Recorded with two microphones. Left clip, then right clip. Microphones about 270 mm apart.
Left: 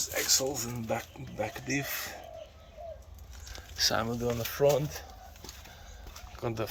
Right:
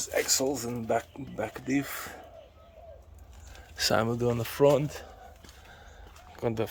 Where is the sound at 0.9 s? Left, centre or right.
Centre.